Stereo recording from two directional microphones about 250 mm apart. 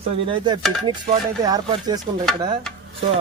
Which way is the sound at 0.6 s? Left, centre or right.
Centre.